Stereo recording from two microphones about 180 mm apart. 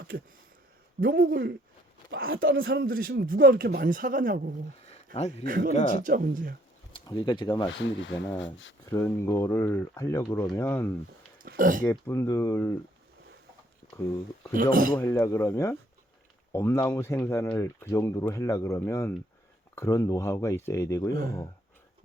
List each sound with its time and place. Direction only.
1.0 s speech: 55° right (ahead or behind)
2.0 s speech: 80° right; by 4.5 s 50° right (ahead or behind)
5.1 s a man's voice: 35° left (ahead or behind)
5.5 s speech: 50° right (ahead or behind)
6.9 s speech: 25° left (ahead or behind)
7.8 s speech: 90° left
8.9 s speech: 15° left (ahead or behind)
11.4 s speech: 50° right (ahead or behind)
11.9 s speech: 15° left (ahead or behind)
13.8 s a sound: 50° left (ahead or behind)
14.5 s speech: 50° right (ahead or behind)
14.9 s speech: 15° left (ahead or behind)